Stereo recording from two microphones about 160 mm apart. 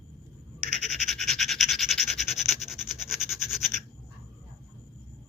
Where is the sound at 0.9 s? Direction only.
Centre (ahead or behind).